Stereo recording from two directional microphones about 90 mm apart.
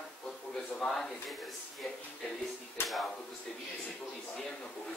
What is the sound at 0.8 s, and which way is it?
Speech, 5° left (ahead or behind).